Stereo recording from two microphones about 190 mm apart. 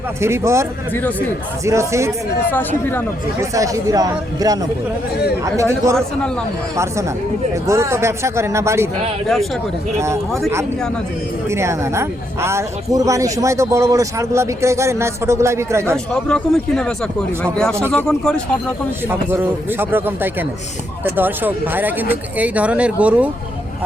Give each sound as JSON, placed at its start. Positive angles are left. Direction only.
{"t": 0.2, "sound": "speech", "side_deg": -15}
{"t": 2.5, "sound": "speech", "side_deg": 10}
{"t": 3.5, "sound": "speech", "side_deg": -15}
{"t": 7.5, "sound": "speech", "side_deg": -15}
{"t": 10.0, "sound": "speech", "side_deg": -15}
{"t": 11.4, "sound": "speech", "side_deg": -15}
{"t": 16.3, "sound": "speech", "side_deg": 5}
{"t": 19.0, "sound": "speech", "side_deg": -10}